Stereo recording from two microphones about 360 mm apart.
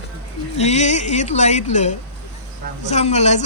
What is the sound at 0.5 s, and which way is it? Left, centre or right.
Speech, centre.